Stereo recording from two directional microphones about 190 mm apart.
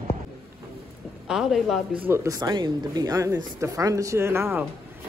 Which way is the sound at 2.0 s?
15° right (ahead or behind).